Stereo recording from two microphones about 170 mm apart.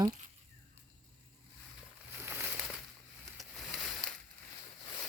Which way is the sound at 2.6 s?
Centre (ahead or behind).